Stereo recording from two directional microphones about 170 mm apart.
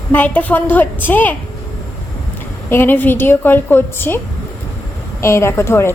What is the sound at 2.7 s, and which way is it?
A woman's voice, 10° left (ahead or behind).